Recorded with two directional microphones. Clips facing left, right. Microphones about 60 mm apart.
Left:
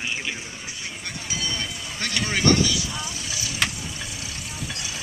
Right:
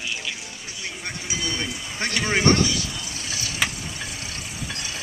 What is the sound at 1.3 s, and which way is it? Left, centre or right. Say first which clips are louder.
Speech: right 1 dB; right.